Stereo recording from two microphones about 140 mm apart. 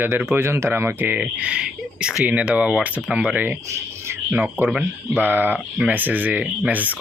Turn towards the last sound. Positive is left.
turn(degrees=-10)  # may be behind; listen again after turning